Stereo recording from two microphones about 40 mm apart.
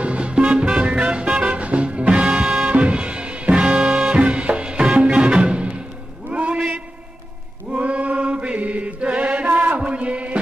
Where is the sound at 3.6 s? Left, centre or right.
Centre.